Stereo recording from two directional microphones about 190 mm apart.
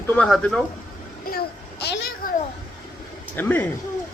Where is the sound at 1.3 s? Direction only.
55° left (ahead or behind).